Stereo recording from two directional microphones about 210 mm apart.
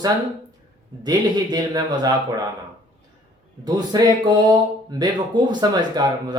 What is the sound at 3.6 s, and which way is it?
Speech, 20° right (ahead or behind).